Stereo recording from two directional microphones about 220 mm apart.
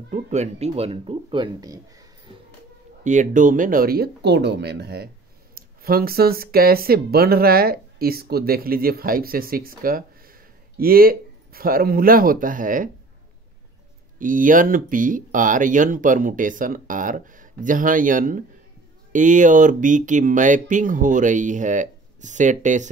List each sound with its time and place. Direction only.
0.1 s speech: 30° right (ahead or behind); by 2.0 s 15° right (ahead or behind)
3.0 s speech: 35° right (ahead or behind)
14.1 s speech: 35° right (ahead or behind)